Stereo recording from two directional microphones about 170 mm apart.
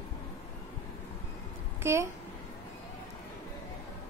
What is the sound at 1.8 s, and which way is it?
Speech, 15° right (ahead or behind).